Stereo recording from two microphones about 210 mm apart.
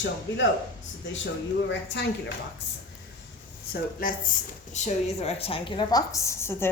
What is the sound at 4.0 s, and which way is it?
Speech, 45° left (ahead or behind).